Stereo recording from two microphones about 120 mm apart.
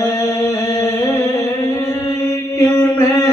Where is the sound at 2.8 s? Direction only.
20° left (ahead or behind).